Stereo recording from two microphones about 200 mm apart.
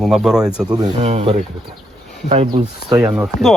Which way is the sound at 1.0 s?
30° right (ahead or behind).